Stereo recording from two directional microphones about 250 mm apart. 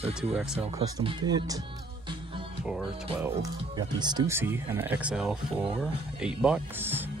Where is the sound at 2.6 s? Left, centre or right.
Centre.